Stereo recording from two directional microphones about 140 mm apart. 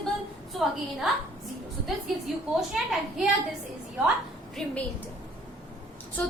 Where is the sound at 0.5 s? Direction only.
Centre (ahead or behind).